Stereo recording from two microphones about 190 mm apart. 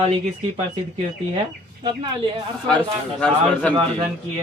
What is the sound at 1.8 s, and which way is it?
Speech, 25° right (ahead or behind).